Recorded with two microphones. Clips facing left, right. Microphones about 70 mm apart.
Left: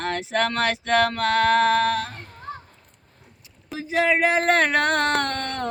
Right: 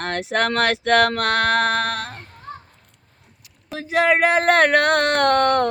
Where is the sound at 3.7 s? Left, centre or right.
Right.